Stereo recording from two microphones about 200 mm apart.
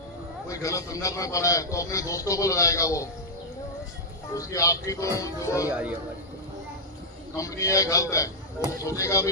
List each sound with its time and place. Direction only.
0.4 s a man's voice: 15° left (ahead or behind)
4.4 s a man's voice: 15° left (ahead or behind)
5.6 s speech: 5° right (ahead or behind)
7.3 s a man's voice: 15° left (ahead or behind)